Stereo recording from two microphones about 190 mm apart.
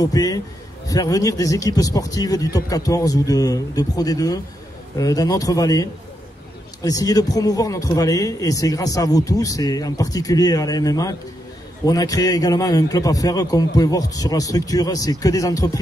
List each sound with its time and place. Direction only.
0.0 s a man's voice: 20° left (ahead or behind)